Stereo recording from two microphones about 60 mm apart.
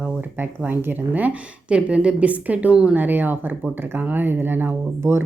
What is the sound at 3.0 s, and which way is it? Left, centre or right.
Speech, right.